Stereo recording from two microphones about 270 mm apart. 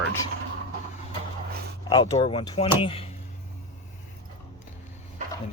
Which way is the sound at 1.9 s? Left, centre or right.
Centre.